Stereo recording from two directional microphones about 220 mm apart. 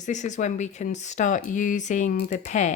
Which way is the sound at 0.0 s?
35° left (ahead or behind).